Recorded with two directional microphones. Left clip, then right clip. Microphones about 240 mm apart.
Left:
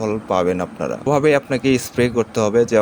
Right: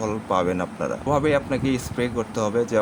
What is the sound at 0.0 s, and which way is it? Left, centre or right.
Speech, centre.